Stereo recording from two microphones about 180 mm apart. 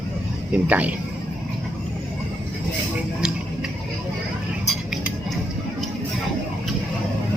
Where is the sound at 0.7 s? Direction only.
10° right (ahead or behind).